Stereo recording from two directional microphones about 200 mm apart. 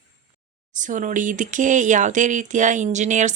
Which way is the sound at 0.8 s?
40° right (ahead or behind).